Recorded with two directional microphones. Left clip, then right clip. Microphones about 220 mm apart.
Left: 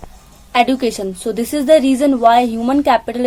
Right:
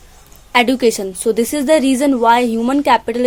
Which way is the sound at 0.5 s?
35° right (ahead or behind).